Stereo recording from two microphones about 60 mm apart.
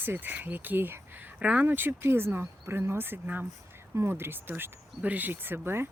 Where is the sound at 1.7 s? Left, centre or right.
Right.